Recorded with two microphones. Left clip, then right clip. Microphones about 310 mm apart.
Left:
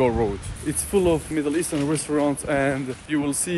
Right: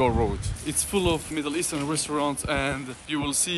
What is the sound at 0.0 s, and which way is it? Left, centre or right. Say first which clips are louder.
Speech: left 2 dB; right.